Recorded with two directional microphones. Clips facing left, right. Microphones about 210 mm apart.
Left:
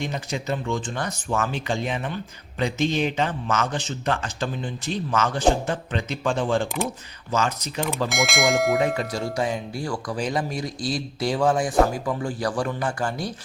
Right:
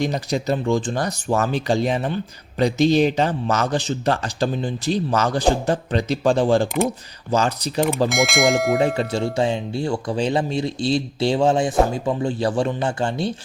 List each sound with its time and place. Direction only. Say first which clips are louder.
0.0 s speech: right 7 dB; 35° right (ahead or behind)
8.1 s speech: right 4 dB; centre (ahead or behind)
9.0 s speech: right 5 dB; 25° right (ahead or behind)